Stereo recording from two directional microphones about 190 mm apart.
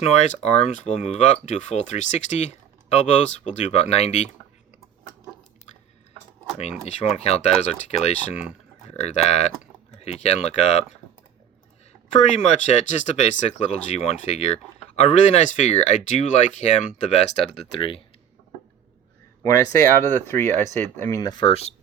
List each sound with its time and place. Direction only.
0.0 s speech: 35° left (ahead or behind)
6.8 s speech: 35° left (ahead or behind)
12.1 s speech: 35° left (ahead or behind)
20.1 s speech: 10° left (ahead or behind); by 21.7 s 30° left (ahead or behind)